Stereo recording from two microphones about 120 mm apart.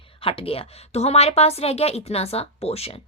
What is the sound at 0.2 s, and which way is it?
A woman's voice, 50° left (ahead or behind).